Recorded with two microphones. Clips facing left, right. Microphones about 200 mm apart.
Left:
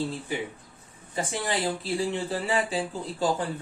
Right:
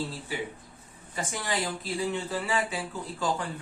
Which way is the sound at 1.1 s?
30° left (ahead or behind).